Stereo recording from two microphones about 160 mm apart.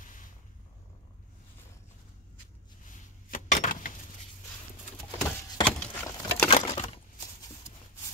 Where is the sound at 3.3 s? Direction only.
55° left (ahead or behind).